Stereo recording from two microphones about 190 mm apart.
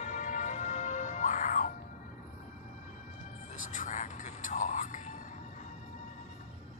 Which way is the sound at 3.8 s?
40° left (ahead or behind).